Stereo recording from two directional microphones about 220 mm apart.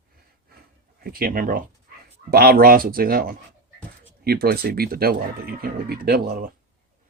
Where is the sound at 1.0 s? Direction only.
40° right (ahead or behind).